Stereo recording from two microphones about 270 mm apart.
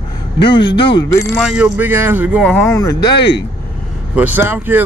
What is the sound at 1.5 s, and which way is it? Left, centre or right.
Speech, centre.